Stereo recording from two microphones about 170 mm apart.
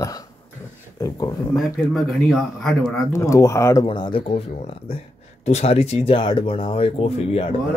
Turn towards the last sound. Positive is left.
turn(degrees=35)  # may be behind; listen again after turning